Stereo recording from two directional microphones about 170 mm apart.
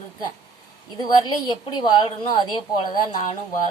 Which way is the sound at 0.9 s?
25° left (ahead or behind).